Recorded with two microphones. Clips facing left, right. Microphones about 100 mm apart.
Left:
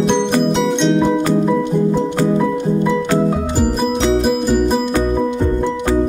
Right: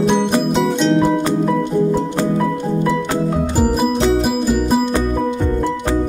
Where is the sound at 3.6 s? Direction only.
5° right (ahead or behind).